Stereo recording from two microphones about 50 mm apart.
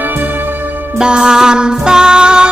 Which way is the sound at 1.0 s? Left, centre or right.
Centre.